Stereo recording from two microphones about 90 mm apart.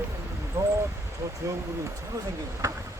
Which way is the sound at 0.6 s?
30° right (ahead or behind).